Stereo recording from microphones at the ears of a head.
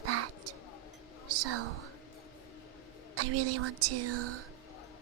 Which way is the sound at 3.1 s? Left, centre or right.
Right.